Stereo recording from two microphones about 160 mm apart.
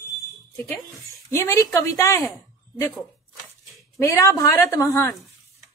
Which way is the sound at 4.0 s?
20° left (ahead or behind).